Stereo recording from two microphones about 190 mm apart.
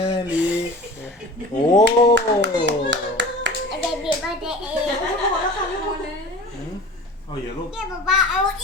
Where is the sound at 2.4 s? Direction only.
70° right (ahead or behind).